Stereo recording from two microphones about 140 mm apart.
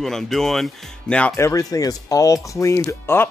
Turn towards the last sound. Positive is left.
turn(degrees=15)  # may be behind; listen again after turning